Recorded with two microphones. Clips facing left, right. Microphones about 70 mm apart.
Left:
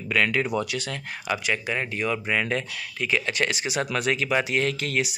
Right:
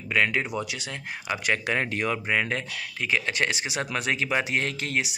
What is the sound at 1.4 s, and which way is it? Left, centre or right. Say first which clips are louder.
Speech: right 1 dB; right.